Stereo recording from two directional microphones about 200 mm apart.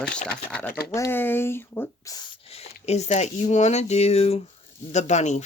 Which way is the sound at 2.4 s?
30° left (ahead or behind).